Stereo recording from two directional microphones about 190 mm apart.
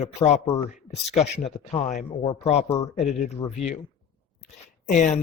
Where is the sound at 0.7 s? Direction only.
35° left (ahead or behind).